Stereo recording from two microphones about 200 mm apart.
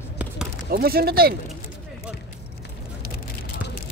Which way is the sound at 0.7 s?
50° right (ahead or behind).